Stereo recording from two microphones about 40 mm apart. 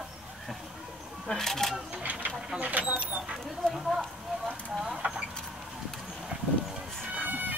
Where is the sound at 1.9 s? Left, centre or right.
Right.